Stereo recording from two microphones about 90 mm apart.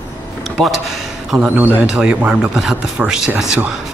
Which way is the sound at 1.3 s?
10° right (ahead or behind).